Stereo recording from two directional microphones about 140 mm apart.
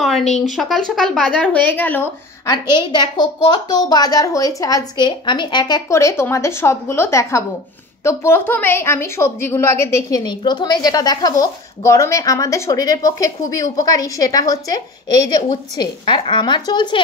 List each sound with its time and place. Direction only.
0.6 s a woman's voice: centre (ahead or behind)
2.4 s speech: 30° left (ahead or behind)
10.2 s speech: 30° left (ahead or behind)